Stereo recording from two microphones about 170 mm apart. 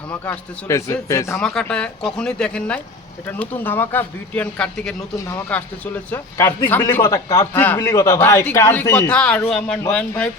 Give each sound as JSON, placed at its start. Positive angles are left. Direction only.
{"t": 0.1, "sound": "a man's voice", "side_deg": 15}
{"t": 1.4, "sound": "a man's voice", "side_deg": 5}